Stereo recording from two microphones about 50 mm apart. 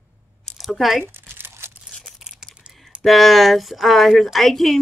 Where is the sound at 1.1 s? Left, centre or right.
Right.